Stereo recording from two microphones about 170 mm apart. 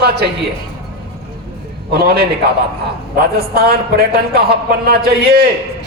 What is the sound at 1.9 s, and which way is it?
Speech, 70° right (ahead or behind).